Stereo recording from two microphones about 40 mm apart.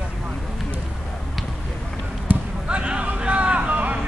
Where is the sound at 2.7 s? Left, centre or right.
Right.